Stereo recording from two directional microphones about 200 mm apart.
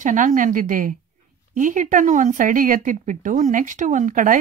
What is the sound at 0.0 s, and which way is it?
Speech, 40° right (ahead or behind).